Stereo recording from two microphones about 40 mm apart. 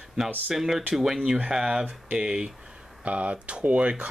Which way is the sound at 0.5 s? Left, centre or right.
Centre.